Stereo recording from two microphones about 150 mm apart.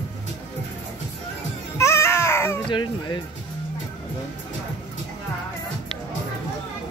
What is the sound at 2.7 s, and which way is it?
Speech, 30° left (ahead or behind).